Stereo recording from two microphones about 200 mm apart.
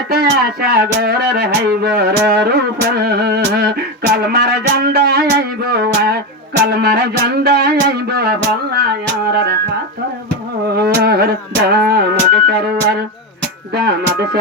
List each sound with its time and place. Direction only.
0.1 s speech: 55° right (ahead or behind)
6.7 s music: 50° right (ahead or behind)
10.7 s music: 50° right (ahead or behind)